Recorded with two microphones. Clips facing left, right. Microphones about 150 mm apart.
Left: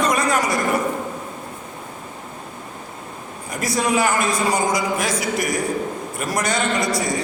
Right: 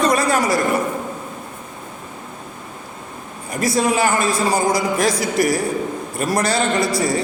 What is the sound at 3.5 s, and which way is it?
A man's voice, 25° right (ahead or behind).